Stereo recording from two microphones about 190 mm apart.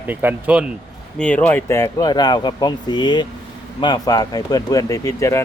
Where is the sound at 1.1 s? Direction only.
10° left (ahead or behind).